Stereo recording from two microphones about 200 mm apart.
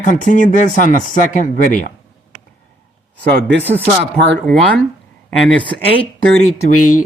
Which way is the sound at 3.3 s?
55° right (ahead or behind).